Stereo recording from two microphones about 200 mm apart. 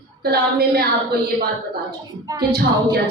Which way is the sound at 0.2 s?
50° right (ahead or behind).